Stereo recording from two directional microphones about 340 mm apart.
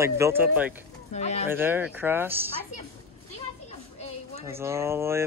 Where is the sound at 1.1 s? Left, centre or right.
Centre.